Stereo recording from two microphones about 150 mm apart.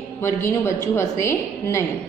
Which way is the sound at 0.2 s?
15° left (ahead or behind).